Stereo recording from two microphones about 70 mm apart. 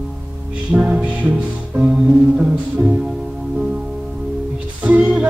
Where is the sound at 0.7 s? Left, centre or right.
Centre.